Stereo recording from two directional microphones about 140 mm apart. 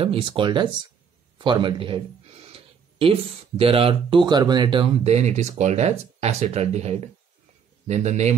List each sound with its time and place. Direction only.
0.0 s speech: 40° right (ahead or behind)